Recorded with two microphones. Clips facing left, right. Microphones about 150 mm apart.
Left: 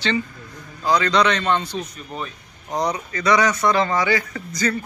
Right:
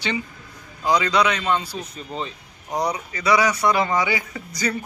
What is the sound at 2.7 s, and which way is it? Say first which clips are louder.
Speech: left 1 dB; 10° right (ahead or behind).